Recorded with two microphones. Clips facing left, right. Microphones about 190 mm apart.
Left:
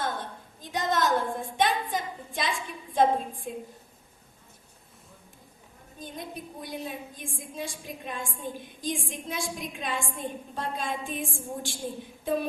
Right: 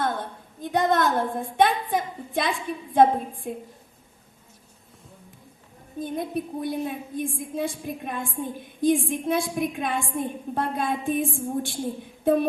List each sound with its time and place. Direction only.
0.6 s a woman's voice: 55° right (ahead or behind)
6.0 s a woman's voice: 55° right (ahead or behind)